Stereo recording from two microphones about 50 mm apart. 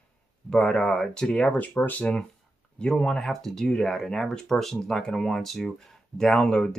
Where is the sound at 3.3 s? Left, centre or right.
Centre.